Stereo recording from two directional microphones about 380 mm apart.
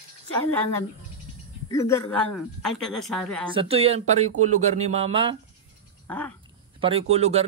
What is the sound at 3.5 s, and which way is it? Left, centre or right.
Music, centre.